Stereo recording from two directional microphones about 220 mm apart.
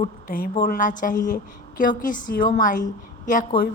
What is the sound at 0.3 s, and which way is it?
A woman's voice, 40° left (ahead or behind).